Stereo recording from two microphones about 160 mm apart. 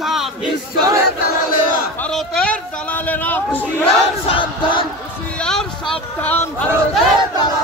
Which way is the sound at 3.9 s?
35° left (ahead or behind).